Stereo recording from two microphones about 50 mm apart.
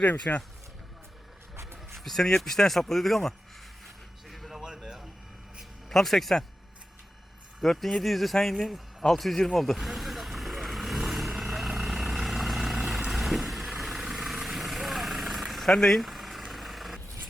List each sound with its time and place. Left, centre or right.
0.0 s speech: left
1.5 s a sound: right
2.0 s speech: centre
4.3 s music: centre
5.9 s speech: centre
7.6 s speech: centre
11.0 s vehicle: centre
15.7 s speech: centre
16.0 s vehicle: centre